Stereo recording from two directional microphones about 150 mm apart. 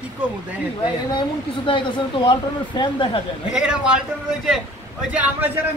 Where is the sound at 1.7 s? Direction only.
35° left (ahead or behind).